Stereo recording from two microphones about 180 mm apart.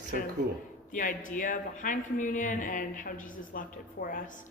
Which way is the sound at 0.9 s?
45° left (ahead or behind).